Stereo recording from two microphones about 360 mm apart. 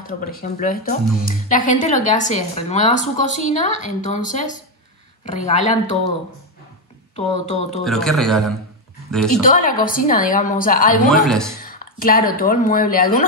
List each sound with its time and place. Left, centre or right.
0.0 s speech: left
7.8 s speech: centre
9.4 s speech: left
11.1 s speech: centre
11.6 s speech: left